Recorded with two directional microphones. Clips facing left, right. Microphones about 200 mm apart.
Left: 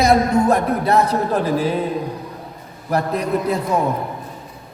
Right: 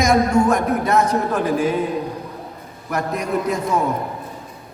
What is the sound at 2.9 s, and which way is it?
Speech, 35° left (ahead or behind).